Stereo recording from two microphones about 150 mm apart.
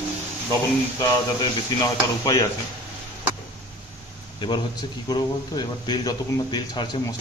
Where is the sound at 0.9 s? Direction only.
25° left (ahead or behind).